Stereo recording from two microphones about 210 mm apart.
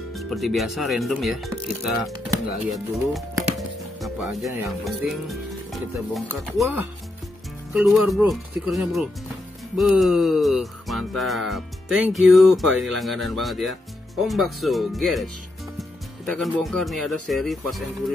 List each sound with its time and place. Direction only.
0.1 s music: centre (ahead or behind)
16.3 s music: centre (ahead or behind)